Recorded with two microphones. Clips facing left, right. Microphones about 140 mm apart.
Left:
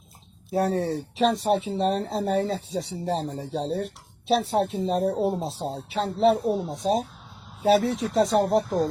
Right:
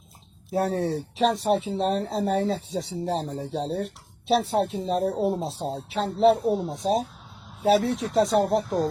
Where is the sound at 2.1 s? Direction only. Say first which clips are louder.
Even; 40° left (ahead or behind).